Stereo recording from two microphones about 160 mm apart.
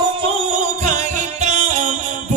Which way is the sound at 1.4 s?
45° right (ahead or behind).